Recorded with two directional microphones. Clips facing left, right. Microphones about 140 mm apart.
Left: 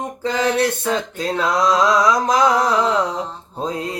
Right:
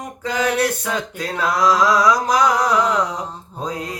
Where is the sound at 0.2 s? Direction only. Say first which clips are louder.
Left 1 dB; 25° left (ahead or behind).